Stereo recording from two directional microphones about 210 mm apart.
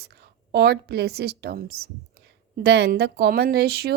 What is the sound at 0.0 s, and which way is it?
A woman's voice, 50° right (ahead or behind).